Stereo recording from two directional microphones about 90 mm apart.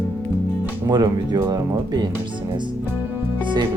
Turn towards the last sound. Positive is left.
turn(degrees=-60)  # may be behind; listen again after turning